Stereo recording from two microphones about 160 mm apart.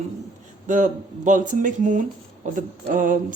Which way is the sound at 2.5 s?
55° right (ahead or behind).